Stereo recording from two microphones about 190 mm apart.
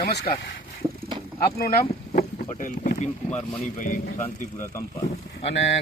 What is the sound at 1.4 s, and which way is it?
A man's voice, 50° left (ahead or behind).